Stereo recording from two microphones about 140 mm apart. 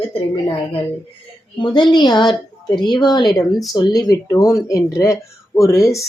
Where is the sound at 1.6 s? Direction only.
35° left (ahead or behind).